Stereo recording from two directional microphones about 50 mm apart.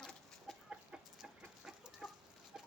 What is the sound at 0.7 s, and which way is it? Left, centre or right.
Chicken, centre.